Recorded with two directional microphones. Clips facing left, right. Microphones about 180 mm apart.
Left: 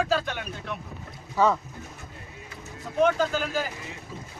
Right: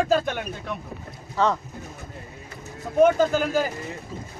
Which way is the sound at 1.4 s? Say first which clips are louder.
Even; 10° left (ahead or behind).